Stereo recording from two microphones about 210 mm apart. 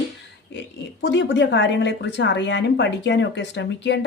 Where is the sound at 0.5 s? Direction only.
55° left (ahead or behind).